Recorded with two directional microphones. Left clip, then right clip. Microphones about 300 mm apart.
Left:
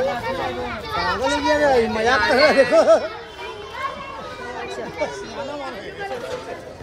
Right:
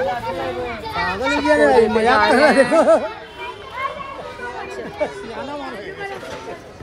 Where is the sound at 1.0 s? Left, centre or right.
Right.